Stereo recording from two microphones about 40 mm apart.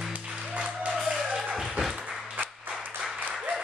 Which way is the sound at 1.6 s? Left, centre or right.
Centre.